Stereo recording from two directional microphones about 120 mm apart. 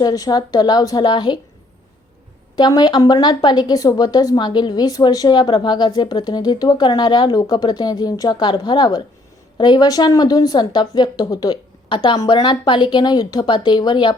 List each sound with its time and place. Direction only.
0.0 s speech: 30° left (ahead or behind)
2.6 s speech: 35° left (ahead or behind)